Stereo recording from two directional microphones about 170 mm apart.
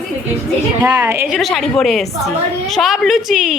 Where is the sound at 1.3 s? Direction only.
Centre (ahead or behind).